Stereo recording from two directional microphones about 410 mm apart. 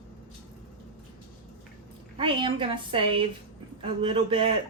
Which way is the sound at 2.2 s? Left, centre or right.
Centre.